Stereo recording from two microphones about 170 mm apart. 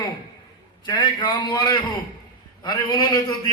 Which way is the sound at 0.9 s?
25° left (ahead or behind).